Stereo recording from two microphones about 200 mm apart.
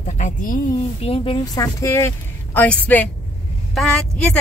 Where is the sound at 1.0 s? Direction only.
30° left (ahead or behind).